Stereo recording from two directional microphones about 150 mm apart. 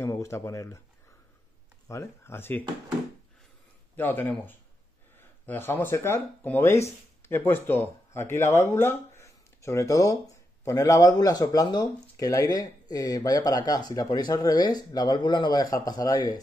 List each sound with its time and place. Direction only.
0.0 s speech: 20° left (ahead or behind)
1.9 s speech: 20° left (ahead or behind)
3.9 s speech: 10° left (ahead or behind)